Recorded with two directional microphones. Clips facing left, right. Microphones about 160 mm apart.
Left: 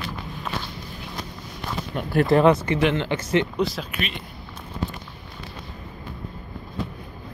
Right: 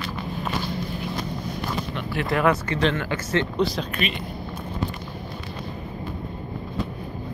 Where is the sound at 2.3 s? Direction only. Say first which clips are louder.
Left 4 dB; 30° left (ahead or behind).